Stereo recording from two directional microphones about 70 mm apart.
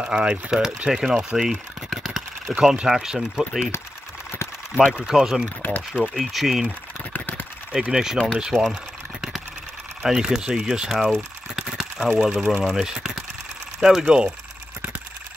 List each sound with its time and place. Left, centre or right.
0.0 s speech: centre
2.5 s speech: centre
4.9 s speech: centre
5.6 s speech: left
5.9 s speech: centre
7.1 s a sound: left
7.7 s speech: centre
8.5 s speech: centre
10.0 s speech: centre